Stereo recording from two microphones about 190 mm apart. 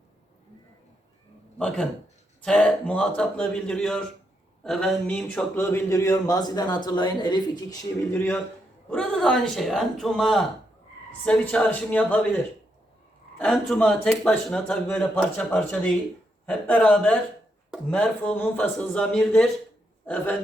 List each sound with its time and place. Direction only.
1.5 s speech: 5° left (ahead or behind); by 7.4 s 25° left (ahead or behind)
8.1 s speech: 10° left (ahead or behind)
13.4 s speech: 5° left (ahead or behind)